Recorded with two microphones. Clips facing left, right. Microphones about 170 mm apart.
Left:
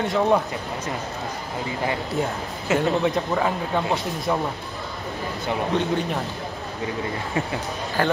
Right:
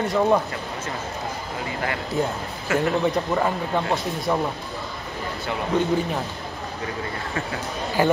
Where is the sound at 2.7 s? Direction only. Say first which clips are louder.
Left 1 dB; 20° left (ahead or behind).